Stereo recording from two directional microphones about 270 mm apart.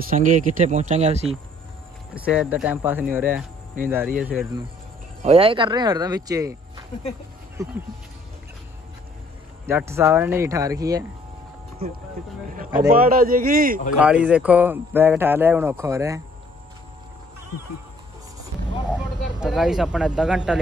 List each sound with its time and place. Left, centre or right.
0.1 s speech: right
2.1 s speech: centre
5.2 s speech: right
7.6 s speech: centre
9.7 s speech: centre
13.0 s a man's voice: right
13.9 s speech: centre
19.4 s speech: centre